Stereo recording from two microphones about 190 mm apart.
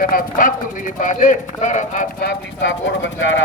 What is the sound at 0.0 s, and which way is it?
Speech, 50° left (ahead or behind).